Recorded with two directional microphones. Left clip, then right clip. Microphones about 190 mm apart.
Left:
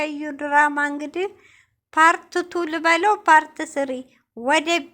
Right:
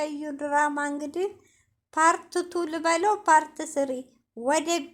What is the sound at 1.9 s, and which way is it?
A woman's voice, 20° left (ahead or behind).